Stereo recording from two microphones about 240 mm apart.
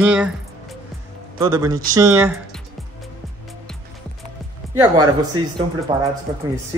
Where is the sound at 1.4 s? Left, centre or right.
Centre.